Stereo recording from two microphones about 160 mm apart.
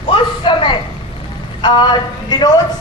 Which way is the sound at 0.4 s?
30° left (ahead or behind).